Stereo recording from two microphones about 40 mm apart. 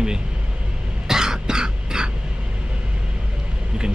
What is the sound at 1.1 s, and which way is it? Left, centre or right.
Music, centre.